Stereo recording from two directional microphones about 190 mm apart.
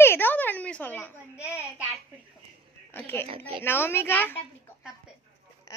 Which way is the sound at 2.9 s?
10° left (ahead or behind).